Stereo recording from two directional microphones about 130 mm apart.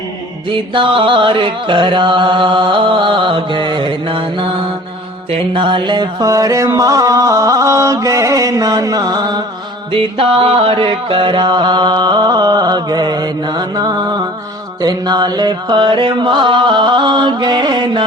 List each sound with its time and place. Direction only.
0.4 s music: 40° right (ahead or behind)
9.9 s music: 45° right (ahead or behind)